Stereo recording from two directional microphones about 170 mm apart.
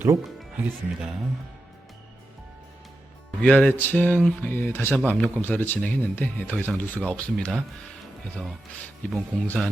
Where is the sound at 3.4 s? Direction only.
5° left (ahead or behind).